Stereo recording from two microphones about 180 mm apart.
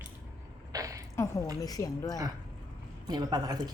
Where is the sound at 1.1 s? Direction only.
15° left (ahead or behind).